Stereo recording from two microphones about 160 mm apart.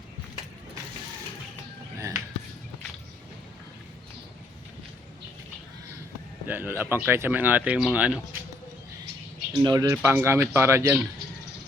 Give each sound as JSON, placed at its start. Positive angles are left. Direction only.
{"t": 2.0, "sound": "a sound", "side_deg": -20}
{"t": 6.5, "sound": "speech", "side_deg": -10}
{"t": 9.6, "sound": "speech", "side_deg": -20}